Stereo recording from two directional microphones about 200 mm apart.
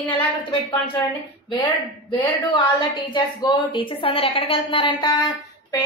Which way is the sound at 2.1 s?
25° left (ahead or behind).